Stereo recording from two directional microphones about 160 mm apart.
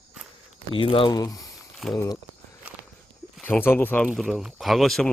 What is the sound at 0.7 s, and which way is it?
Speech, 35° left (ahead or behind).